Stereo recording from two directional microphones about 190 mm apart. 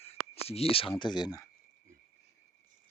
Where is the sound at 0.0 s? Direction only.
30° left (ahead or behind).